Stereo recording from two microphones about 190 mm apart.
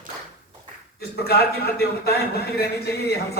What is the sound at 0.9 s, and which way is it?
A man's voice, 55° left (ahead or behind).